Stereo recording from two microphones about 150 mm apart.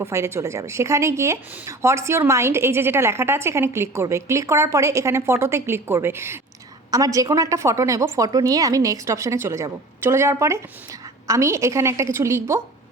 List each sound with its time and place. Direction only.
0.0 s speech: 20° right (ahead or behind)